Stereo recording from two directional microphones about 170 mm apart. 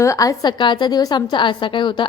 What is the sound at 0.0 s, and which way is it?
A woman's voice, 20° left (ahead or behind).